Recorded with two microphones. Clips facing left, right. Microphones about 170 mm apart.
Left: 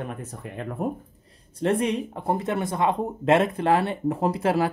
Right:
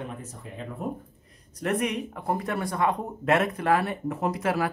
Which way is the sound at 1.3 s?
30° left (ahead or behind).